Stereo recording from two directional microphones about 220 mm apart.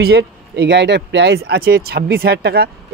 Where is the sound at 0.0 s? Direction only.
50° right (ahead or behind).